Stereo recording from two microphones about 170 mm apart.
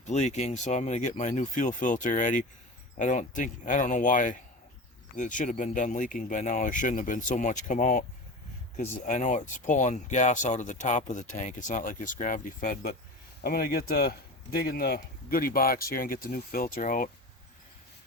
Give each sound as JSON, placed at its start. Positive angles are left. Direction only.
{"t": 0.0, "sound": "speech", "side_deg": 40}